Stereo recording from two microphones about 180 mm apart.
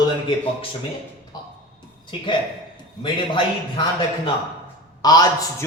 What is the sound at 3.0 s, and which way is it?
Speech, 25° left (ahead or behind).